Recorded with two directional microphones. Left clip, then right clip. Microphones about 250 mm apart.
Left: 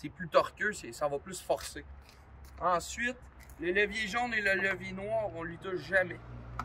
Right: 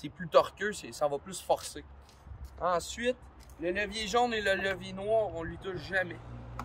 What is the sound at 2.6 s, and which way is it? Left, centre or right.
Speech, right.